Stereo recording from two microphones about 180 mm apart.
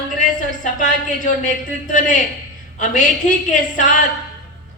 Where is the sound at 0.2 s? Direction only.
45° left (ahead or behind).